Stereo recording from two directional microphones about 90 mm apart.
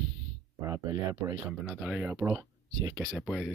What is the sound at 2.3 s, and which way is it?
Speech, 35° right (ahead or behind).